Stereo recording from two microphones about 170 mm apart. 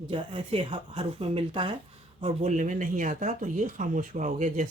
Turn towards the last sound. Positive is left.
turn(degrees=-45)  # may be behind; listen again after turning